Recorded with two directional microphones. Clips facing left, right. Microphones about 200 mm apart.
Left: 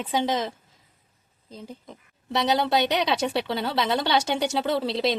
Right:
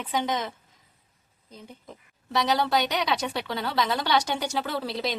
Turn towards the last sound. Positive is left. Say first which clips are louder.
# left 6 dB
turn(degrees=30)  # may be behind; listen again after turning